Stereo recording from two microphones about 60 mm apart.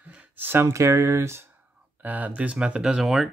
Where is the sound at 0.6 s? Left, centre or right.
Right.